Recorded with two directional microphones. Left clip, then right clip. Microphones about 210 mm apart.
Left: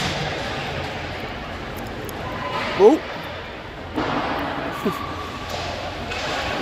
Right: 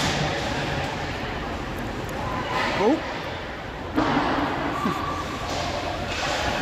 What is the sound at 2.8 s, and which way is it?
Speech, 30° left (ahead or behind).